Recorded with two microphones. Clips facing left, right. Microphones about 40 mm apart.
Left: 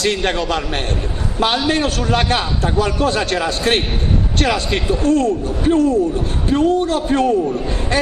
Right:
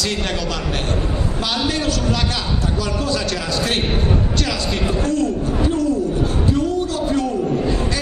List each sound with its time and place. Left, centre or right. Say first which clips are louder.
0.0 s a man's voice: left 5 dB; left
1.4 s a man's voice: left 6 dB; left
5.0 s a man's voice: left 6 dB; left